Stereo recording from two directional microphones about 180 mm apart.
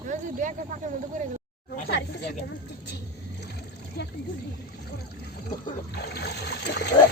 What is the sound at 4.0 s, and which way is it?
Speech, 60° left (ahead or behind).